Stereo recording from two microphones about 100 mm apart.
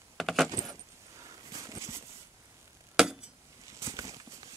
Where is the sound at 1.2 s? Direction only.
35° right (ahead or behind).